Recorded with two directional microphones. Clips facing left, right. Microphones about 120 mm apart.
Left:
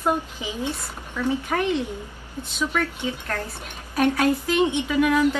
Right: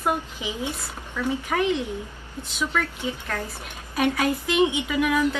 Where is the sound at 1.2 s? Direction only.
15° left (ahead or behind).